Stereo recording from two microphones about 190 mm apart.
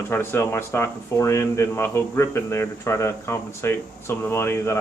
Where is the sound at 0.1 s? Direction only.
15° left (ahead or behind).